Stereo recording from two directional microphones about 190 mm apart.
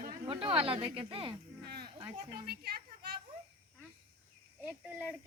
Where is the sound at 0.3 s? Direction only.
30° right (ahead or behind).